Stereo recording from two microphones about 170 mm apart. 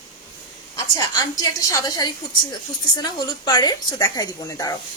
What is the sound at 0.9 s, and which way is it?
A woman's voice, 20° left (ahead or behind).